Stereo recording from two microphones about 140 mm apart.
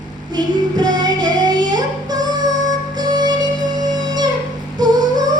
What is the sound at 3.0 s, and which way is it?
Music, 30° right (ahead or behind).